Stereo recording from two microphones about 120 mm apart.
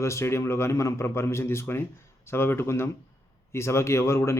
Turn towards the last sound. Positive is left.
turn(degrees=20)  # may be behind; listen again after turning